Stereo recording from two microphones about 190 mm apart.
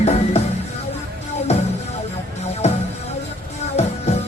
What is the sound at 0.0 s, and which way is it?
Music, 35° left (ahead or behind).